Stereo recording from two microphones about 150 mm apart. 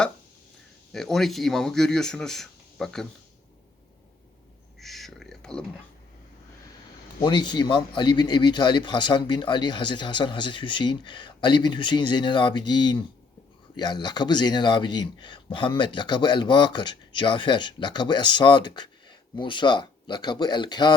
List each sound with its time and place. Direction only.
0.9 s speech: centre (ahead or behind)
4.8 s whispering: centre (ahead or behind)
7.2 s a man's voice: 30° left (ahead or behind)